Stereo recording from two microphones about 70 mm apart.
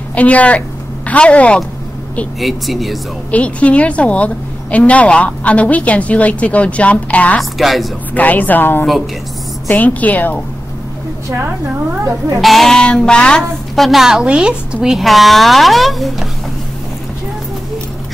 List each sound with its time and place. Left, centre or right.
0.1 s a woman's voice: centre
2.4 s speech: centre
3.3 s a woman's voice: centre
7.3 s speech: centre
8.1 s a woman's voice: left
12.4 s speech: centre
13.7 s speech: centre